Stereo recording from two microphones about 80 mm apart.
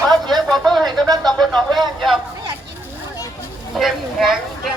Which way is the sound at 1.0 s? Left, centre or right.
Right.